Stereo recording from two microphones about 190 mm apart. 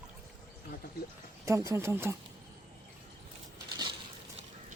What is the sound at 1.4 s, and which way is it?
Speech, 15° right (ahead or behind).